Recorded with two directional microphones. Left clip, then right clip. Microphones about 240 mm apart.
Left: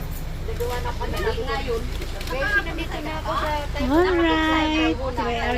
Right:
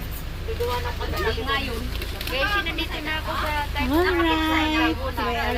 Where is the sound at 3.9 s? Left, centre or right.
Centre.